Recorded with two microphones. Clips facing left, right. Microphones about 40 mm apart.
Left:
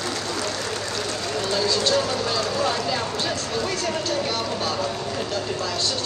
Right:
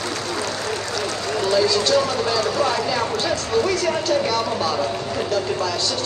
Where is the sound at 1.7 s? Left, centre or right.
Left.